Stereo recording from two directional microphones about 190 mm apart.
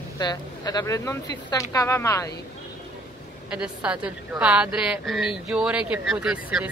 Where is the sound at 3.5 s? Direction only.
5° right (ahead or behind).